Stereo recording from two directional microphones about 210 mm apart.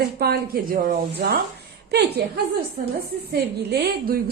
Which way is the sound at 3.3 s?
50° right (ahead or behind).